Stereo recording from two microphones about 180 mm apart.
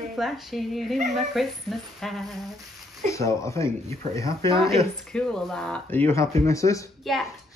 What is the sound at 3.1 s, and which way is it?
Speech, 15° left (ahead or behind).